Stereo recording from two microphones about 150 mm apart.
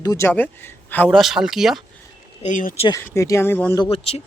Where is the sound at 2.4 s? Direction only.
55° left (ahead or behind).